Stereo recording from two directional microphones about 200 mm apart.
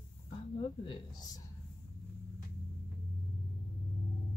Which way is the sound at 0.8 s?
25° left (ahead or behind).